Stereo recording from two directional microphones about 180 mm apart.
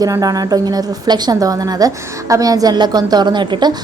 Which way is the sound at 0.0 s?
20° right (ahead or behind).